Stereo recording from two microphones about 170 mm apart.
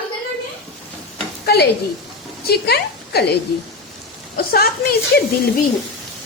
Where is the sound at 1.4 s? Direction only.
70° left (ahead or behind).